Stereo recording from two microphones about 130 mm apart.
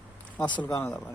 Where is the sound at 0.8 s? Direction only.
5° left (ahead or behind).